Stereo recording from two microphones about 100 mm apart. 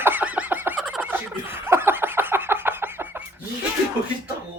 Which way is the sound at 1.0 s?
20° right (ahead or behind).